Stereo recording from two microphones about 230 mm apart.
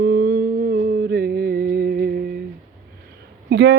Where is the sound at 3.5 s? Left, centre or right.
Right.